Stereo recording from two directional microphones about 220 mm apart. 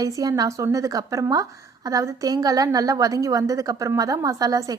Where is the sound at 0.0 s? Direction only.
15° right (ahead or behind).